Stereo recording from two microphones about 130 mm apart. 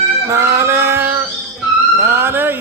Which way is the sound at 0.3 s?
20° right (ahead or behind).